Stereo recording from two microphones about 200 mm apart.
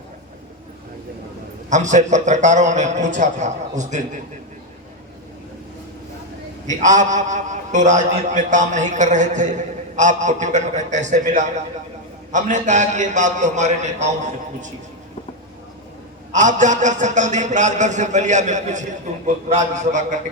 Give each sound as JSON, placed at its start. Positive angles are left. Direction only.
{"t": 1.7, "sound": "a man's voice", "side_deg": -35}
{"t": 6.7, "sound": "a man's voice", "side_deg": -40}
{"t": 16.3, "sound": "a man's voice", "side_deg": -40}